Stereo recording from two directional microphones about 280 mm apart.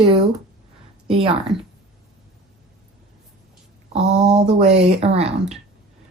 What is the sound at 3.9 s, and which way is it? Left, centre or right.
Speech, right.